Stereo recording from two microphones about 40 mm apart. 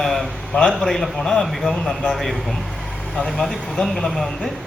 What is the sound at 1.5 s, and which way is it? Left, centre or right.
A man's voice, centre.